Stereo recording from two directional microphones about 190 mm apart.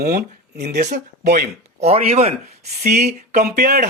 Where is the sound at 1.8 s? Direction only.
35° right (ahead or behind).